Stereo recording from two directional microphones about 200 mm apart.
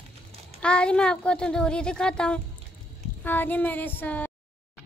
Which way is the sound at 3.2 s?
10° left (ahead or behind).